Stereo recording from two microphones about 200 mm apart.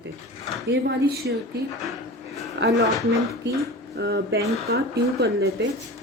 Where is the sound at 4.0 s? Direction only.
55° right (ahead or behind).